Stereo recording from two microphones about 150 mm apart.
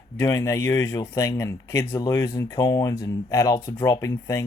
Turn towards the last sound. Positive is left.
turn(degrees=20)  # may be behind; listen again after turning